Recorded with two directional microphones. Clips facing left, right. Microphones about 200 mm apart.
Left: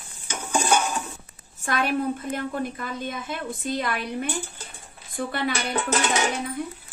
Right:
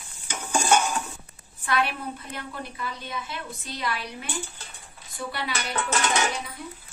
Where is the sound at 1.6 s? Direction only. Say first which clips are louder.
Left 3 dB; 45° left (ahead or behind).